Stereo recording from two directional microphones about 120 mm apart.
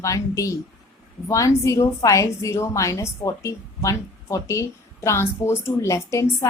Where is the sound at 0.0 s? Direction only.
25° left (ahead or behind).